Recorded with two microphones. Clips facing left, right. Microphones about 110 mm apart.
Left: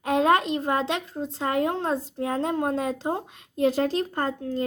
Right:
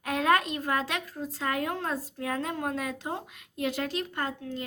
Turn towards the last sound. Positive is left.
turn(degrees=35)  # may be behind; listen again after turning